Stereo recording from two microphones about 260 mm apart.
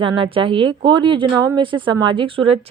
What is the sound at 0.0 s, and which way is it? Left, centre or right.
A woman's voice, centre.